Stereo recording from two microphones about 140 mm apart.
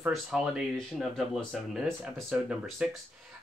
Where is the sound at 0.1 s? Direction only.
Centre (ahead or behind).